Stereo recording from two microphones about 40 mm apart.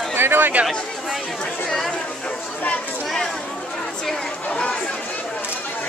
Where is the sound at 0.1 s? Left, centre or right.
Right.